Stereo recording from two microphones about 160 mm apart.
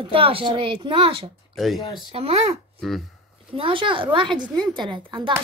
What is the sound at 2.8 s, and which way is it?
Speech, centre (ahead or behind).